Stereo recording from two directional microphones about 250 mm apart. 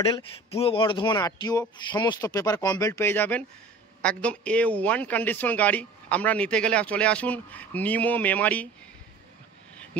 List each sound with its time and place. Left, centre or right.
0.1 s a man's voice: left; by 8.6 s centre